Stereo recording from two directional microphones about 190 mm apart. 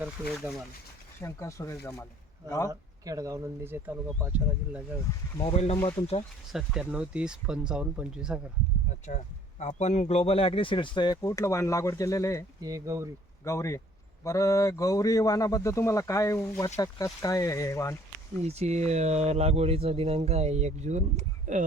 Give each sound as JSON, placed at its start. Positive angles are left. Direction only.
{"t": 0.0, "sound": "speech", "side_deg": -5}
{"t": 1.2, "sound": "speech", "side_deg": 15}
{"t": 2.6, "sound": "speech", "side_deg": -20}
{"t": 5.4, "sound": "speech", "side_deg": 30}
{"t": 5.7, "sound": "speech", "side_deg": 15}
{"t": 6.5, "sound": "speech", "side_deg": 0}
{"t": 9.0, "sound": "speech", "side_deg": 40}
{"t": 12.6, "sound": "speech", "side_deg": -15}
{"t": 13.4, "sound": "speech", "side_deg": 15}
{"t": 18.4, "sound": "speech", "side_deg": -35}